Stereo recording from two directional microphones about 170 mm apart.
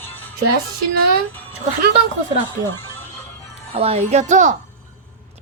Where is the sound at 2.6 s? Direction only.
15° left (ahead or behind).